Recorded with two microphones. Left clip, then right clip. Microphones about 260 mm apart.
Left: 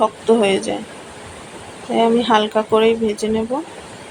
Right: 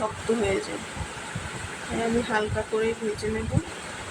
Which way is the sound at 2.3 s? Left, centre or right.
Left.